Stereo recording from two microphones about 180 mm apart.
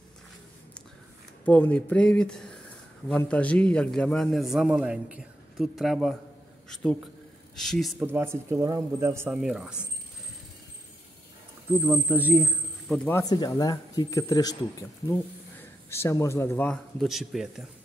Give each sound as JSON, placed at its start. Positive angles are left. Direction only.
{"t": 1.4, "sound": "a man's voice", "side_deg": 10}
{"t": 8.0, "sound": "speech", "side_deg": -10}
{"t": 11.8, "sound": "speech", "side_deg": -10}
{"t": 12.9, "sound": "speech", "side_deg": 10}
{"t": 13.2, "sound": "speech", "side_deg": 20}